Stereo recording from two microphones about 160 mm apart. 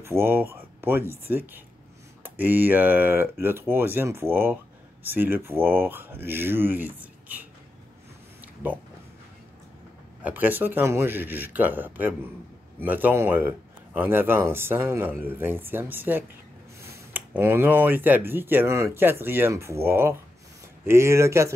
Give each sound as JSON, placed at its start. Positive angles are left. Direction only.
{"t": 0.0, "sound": "speech", "side_deg": -15}
{"t": 10.2, "sound": "speech", "side_deg": -10}